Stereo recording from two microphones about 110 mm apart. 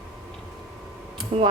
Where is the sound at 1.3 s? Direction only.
75° right (ahead or behind).